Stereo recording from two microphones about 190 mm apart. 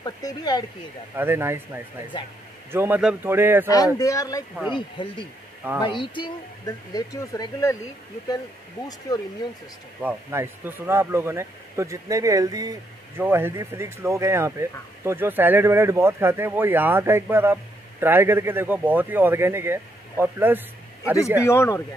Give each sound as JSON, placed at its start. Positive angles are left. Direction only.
{"t": 0.0, "sound": "speech", "side_deg": 20}
{"t": 1.1, "sound": "speech", "side_deg": -10}
{"t": 2.7, "sound": "speech", "side_deg": -10}
{"t": 3.6, "sound": "speech", "side_deg": 20}
{"t": 9.1, "sound": "speech", "side_deg": 20}
{"t": 10.0, "sound": "speech", "side_deg": -10}
{"t": 21.5, "sound": "speech", "side_deg": 15}